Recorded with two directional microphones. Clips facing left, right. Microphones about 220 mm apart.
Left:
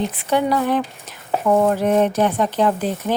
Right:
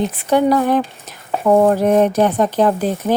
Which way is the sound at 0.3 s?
45° right (ahead or behind).